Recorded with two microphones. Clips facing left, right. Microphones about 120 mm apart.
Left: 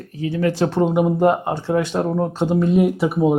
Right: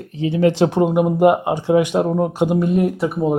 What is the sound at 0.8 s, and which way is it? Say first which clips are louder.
Speech: right 1 dB; 5° right (ahead or behind).